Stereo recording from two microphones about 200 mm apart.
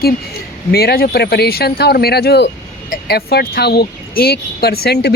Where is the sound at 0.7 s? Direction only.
50° left (ahead or behind).